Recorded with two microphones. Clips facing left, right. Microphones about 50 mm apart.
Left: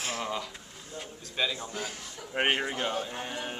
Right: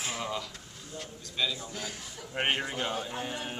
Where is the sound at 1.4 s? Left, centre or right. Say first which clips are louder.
Left 2 dB; left.